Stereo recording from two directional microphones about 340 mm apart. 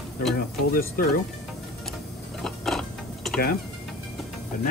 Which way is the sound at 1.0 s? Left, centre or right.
Left.